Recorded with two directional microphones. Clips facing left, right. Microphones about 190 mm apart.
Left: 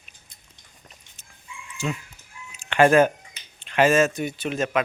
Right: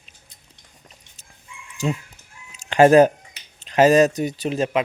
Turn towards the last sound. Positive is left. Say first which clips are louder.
# right 3 dB
turn(degrees=-30)  # may be behind; listen again after turning